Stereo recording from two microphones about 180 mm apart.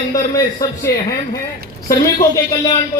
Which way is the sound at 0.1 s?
20° left (ahead or behind).